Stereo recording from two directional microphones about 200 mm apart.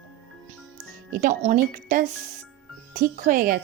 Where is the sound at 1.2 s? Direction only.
40° right (ahead or behind).